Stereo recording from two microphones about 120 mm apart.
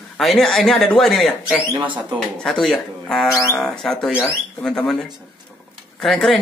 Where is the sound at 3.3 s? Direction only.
25° left (ahead or behind).